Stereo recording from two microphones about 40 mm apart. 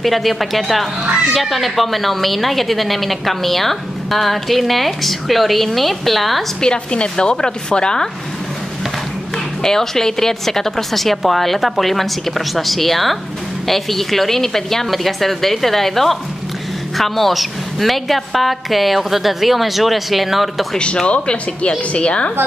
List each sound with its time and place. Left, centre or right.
0.0 s a woman's voice: centre
6.6 s speech: left
9.6 s a woman's voice: centre
20.7 s speech: left